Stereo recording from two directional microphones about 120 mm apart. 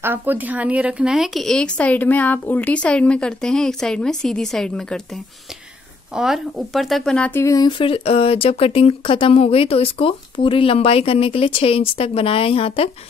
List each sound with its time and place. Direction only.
0.0 s a woman's voice: 15° right (ahead or behind); by 7.3 s 5° left (ahead or behind)
7.3 s speech: 30° left (ahead or behind)
7.7 s speech: 50° left (ahead or behind)